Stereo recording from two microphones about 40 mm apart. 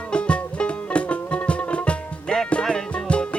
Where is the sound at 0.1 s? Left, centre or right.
Left.